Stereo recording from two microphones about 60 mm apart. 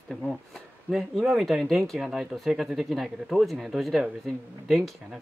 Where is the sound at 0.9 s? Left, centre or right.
Centre.